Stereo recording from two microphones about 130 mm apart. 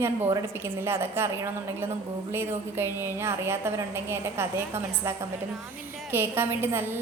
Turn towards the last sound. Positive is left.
turn(degrees=-15)  # may be behind; listen again after turning